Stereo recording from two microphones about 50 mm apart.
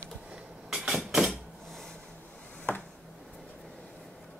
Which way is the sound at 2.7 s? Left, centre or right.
Left.